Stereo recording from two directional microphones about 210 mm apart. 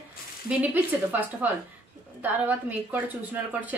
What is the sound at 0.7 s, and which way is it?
A woman's voice, 10° right (ahead or behind).